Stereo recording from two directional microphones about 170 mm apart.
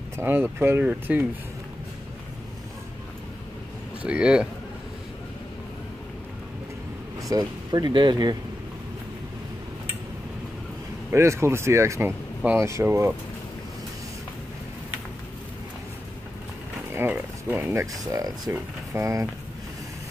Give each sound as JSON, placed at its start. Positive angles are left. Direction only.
{"t": 0.2, "sound": "speech", "side_deg": -10}
{"t": 4.0, "sound": "speech", "side_deg": -5}
{"t": 7.2, "sound": "speech", "side_deg": -20}
{"t": 11.1, "sound": "speech", "side_deg": -15}
{"t": 16.9, "sound": "speech", "side_deg": -10}